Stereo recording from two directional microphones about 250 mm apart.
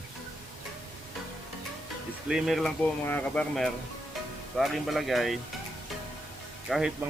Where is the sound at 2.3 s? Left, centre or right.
Centre.